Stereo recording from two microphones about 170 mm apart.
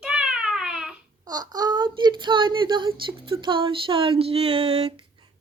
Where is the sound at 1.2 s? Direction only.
25° right (ahead or behind).